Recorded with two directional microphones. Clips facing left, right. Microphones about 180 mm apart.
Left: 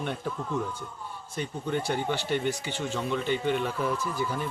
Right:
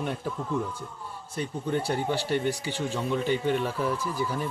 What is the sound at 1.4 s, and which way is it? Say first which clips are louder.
Speech: right 2 dB; 35° right (ahead or behind).